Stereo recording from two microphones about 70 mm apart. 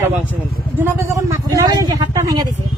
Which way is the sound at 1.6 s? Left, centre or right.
Right.